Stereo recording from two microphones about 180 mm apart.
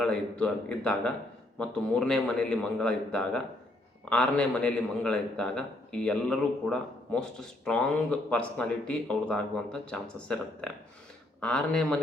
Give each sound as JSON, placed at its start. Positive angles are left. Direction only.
{"t": 0.0, "sound": "a man's voice", "side_deg": 5}